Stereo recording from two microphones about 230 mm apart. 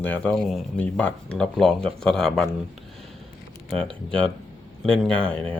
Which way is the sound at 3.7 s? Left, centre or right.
Centre.